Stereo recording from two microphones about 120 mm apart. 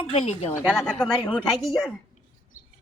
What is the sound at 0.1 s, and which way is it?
Speech, 65° left (ahead or behind).